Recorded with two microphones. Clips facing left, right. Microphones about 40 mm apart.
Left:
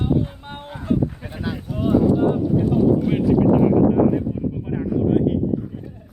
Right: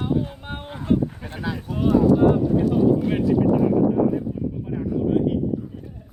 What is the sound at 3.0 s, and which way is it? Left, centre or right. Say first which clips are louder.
Speech: left 2 dB; centre.